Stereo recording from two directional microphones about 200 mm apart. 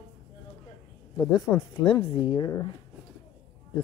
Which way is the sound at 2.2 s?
25° left (ahead or behind).